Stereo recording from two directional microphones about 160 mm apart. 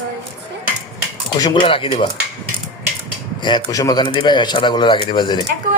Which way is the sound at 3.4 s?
25° left (ahead or behind).